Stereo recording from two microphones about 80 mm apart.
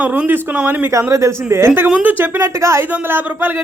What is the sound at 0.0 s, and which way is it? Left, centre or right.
Speech, centre.